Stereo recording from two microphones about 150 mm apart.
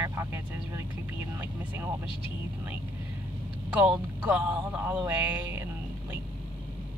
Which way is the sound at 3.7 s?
10° right (ahead or behind).